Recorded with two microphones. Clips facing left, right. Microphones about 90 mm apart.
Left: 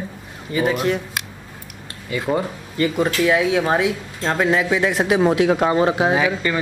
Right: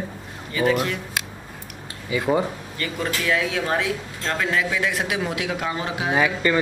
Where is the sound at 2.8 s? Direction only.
20° left (ahead or behind); by 6.1 s 35° left (ahead or behind).